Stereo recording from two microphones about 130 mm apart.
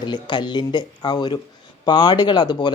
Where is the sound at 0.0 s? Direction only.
35° left (ahead or behind).